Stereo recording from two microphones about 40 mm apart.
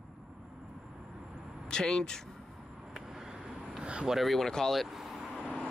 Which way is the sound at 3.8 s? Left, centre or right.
Right.